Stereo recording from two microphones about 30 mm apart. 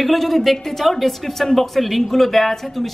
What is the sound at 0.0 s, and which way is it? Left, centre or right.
A woman's voice, centre.